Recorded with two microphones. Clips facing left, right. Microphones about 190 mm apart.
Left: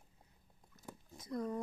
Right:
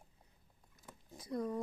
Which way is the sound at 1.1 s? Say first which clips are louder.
Right 1 dB; 30° right (ahead or behind).